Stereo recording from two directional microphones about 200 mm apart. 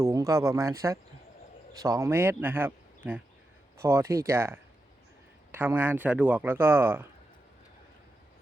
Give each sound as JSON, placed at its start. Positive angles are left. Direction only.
{"t": 0.0, "sound": "speech", "side_deg": -15}